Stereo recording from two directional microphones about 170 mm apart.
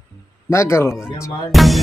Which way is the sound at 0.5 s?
15° left (ahead or behind).